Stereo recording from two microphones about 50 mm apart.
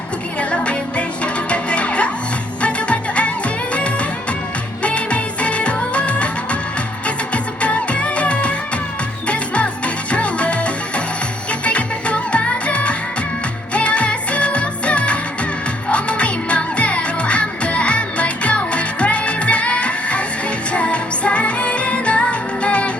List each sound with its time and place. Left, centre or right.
0.3 s music: left